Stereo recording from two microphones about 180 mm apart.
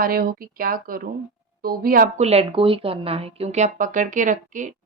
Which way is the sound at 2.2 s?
35° right (ahead or behind).